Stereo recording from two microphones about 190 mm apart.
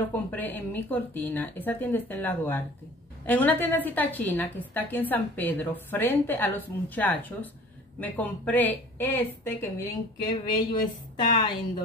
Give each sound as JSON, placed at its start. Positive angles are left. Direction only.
{"t": 0.1, "sound": "a woman's voice", "side_deg": 10}
{"t": 10.4, "sound": "a woman's voice", "side_deg": 25}